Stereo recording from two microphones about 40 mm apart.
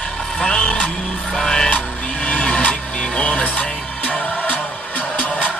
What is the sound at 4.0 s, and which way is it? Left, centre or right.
Music, left.